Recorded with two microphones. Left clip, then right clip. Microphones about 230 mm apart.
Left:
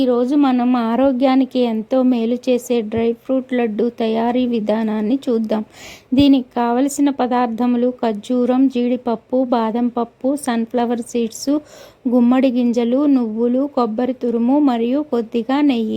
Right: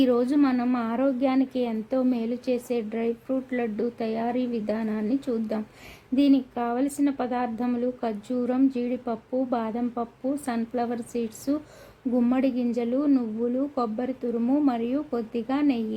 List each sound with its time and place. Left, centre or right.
0.0 s a woman's voice: left